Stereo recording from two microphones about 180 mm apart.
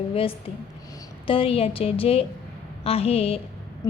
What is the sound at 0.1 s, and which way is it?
A woman's voice, 30° left (ahead or behind).